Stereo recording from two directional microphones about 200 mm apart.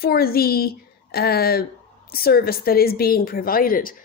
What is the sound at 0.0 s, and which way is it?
A woman's voice, 50° left (ahead or behind).